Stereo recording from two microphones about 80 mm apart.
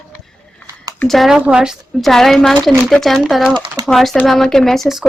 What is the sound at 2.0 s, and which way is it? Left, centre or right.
Speech, centre.